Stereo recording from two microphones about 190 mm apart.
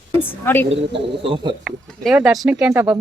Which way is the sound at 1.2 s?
25° right (ahead or behind).